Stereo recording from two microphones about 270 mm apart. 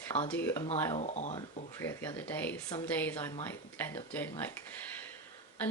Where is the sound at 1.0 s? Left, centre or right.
Left.